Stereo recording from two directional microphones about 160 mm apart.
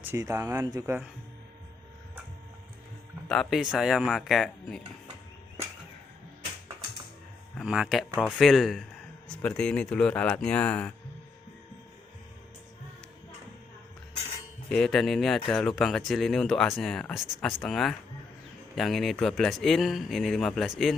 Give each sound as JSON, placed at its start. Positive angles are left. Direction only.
{"t": 0.0, "sound": "speech", "side_deg": -15}
{"t": 3.2, "sound": "speech", "side_deg": 0}
{"t": 7.5, "sound": "speech", "side_deg": -5}
{"t": 14.7, "sound": "speech", "side_deg": 5}